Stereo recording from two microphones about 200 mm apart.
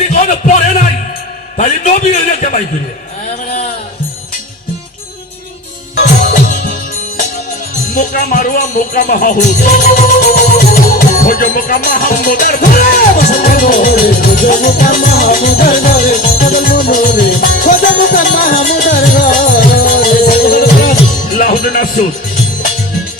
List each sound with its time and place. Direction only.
0.2 s a man's voice: 35° left (ahead or behind)
6.0 s music: 40° left (ahead or behind)
7.9 s music: 40° left (ahead or behind)